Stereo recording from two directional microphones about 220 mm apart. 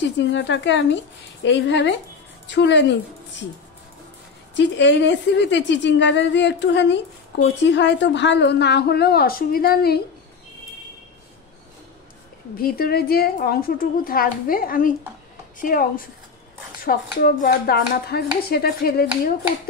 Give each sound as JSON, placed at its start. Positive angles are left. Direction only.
{"t": 0.2, "sound": "a woman's voice", "side_deg": 55}
{"t": 4.6, "sound": "speech", "side_deg": 55}
{"t": 12.5, "sound": "speech", "side_deg": 45}